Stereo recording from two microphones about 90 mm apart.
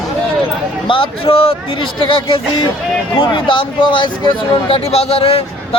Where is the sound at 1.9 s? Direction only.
70° left (ahead or behind).